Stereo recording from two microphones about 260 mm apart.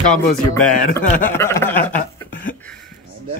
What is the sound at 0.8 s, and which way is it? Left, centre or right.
Speech, left.